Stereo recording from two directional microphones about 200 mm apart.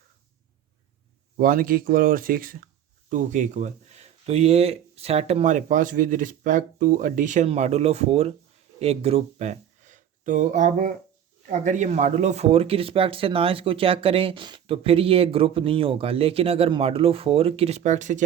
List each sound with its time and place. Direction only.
1.4 s speech: 45° right (ahead or behind)